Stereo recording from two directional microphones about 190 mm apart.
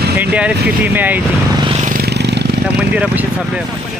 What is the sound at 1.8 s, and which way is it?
Vehicle, 50° right (ahead or behind).